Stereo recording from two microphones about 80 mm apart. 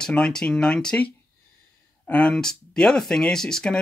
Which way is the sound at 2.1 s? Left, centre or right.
Centre.